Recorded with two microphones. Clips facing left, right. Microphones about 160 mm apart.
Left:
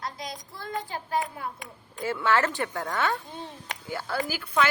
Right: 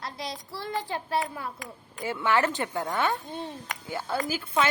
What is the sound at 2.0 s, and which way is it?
A woman's voice, 15° right (ahead or behind).